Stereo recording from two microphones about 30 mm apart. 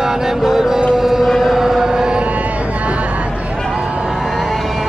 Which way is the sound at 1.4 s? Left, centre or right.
Centre.